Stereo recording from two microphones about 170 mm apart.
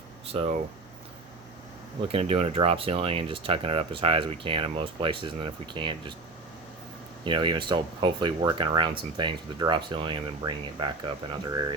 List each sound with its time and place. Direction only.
0.3 s speech: 35° right (ahead or behind)
2.1 s speech: 35° right (ahead or behind)
7.3 s speech: 30° right (ahead or behind)